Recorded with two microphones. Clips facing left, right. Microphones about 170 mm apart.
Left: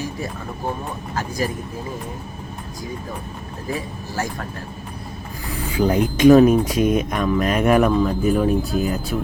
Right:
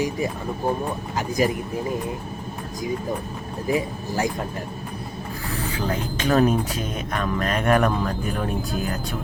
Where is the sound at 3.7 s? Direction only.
20° right (ahead or behind).